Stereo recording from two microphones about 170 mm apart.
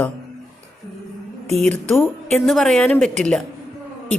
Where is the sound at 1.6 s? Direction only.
5° left (ahead or behind).